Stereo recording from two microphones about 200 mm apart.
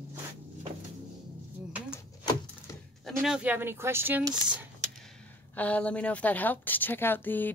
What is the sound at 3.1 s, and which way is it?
Speech, centre (ahead or behind).